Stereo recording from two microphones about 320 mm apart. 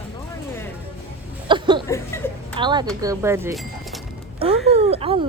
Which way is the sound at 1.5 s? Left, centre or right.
Centre.